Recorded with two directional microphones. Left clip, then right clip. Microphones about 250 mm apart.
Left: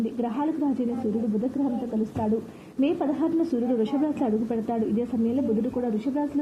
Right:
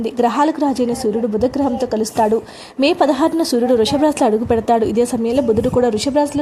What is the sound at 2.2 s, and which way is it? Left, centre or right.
A woman's voice, right.